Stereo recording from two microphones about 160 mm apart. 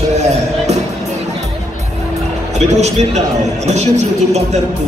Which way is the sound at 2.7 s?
45° right (ahead or behind).